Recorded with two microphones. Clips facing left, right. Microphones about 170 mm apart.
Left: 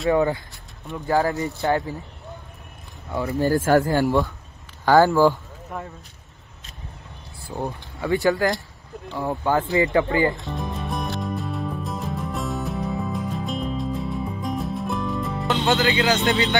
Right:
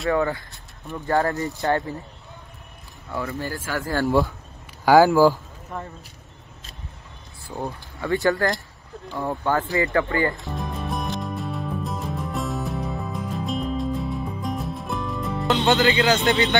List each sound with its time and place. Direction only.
0.1 s speech: 15° left (ahead or behind)
0.8 s speech: centre (ahead or behind)
3.1 s speech: 20° left (ahead or behind)
3.3 s speech: 45° left (ahead or behind)
3.8 s speech: 15° left (ahead or behind)
4.8 s speech: 10° right (ahead or behind)
7.4 s speech: 15° left (ahead or behind)
10.3 s music: centre (ahead or behind)